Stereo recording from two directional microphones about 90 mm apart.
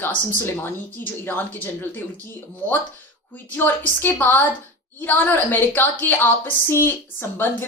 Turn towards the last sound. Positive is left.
turn(degrees=20)  # may be behind; listen again after turning